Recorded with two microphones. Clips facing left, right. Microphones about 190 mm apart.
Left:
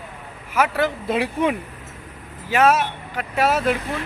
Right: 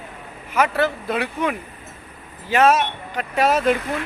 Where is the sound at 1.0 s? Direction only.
25° left (ahead or behind).